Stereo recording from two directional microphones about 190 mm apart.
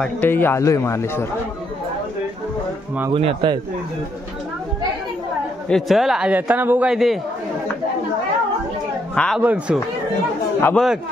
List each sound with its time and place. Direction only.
0.0 s speech: 10° left (ahead or behind)
3.1 s speech: 30° right (ahead or behind)
5.7 s a man's voice: centre (ahead or behind)
9.1 s speech: 5° left (ahead or behind)
9.4 s speech: 10° right (ahead or behind)
10.6 s speech: 5° left (ahead or behind)